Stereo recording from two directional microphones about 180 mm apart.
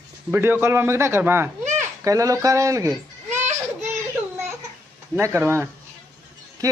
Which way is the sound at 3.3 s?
40° right (ahead or behind).